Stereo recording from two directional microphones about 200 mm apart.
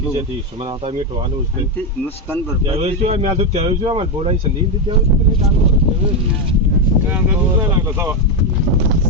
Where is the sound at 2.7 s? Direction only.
30° right (ahead or behind).